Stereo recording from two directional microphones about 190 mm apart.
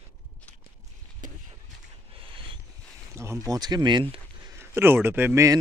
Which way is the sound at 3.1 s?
15° right (ahead or behind).